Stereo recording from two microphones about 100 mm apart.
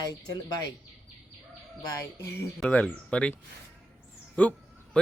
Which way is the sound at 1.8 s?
35° left (ahead or behind).